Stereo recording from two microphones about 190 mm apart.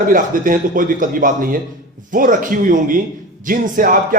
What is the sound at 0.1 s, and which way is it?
A man's voice, 45° right (ahead or behind).